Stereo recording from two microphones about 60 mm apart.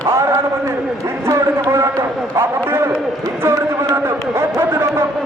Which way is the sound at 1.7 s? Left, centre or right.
Right.